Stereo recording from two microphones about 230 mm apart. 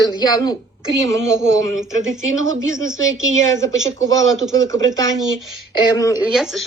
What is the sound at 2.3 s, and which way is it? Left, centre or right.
Speech, right.